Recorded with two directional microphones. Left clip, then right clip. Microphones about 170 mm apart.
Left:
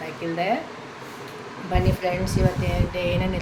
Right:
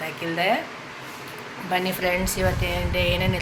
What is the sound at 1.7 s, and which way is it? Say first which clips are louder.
Speech: right 1 dB; 5° right (ahead or behind).